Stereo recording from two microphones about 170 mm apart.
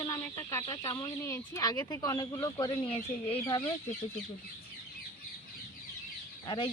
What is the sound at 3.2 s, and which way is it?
Speech, 15° left (ahead or behind).